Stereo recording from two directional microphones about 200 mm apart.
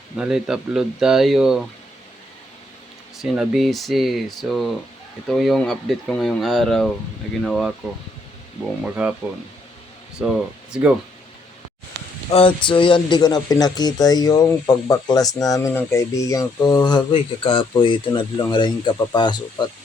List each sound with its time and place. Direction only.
0.2 s speech: 5° right (ahead or behind)
3.2 s speech: centre (ahead or behind)
8.8 s speech: 5° right (ahead or behind)
10.2 s speech: 5° right (ahead or behind)
12.3 s speech: 30° left (ahead or behind)